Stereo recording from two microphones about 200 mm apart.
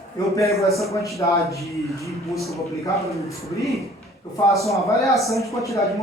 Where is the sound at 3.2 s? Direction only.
15° left (ahead or behind).